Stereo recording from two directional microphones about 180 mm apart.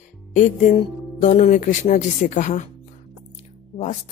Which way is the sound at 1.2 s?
40° left (ahead or behind).